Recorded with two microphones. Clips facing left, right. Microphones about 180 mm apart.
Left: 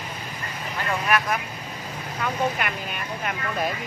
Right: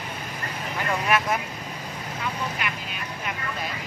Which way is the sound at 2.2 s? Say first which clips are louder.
Left 6 dB; 50° left (ahead or behind).